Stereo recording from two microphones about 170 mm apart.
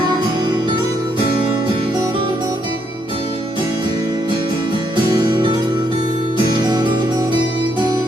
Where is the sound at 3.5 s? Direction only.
30° right (ahead or behind).